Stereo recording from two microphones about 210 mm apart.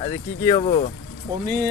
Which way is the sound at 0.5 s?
30° left (ahead or behind).